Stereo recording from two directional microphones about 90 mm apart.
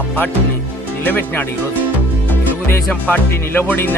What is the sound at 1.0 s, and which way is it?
Speech, 20° left (ahead or behind).